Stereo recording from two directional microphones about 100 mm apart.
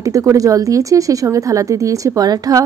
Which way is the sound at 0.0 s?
30° right (ahead or behind).